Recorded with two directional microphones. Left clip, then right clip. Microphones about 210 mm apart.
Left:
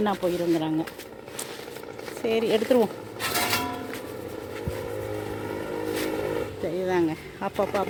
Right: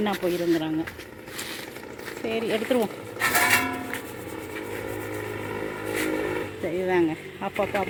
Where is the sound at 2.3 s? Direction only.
15° left (ahead or behind).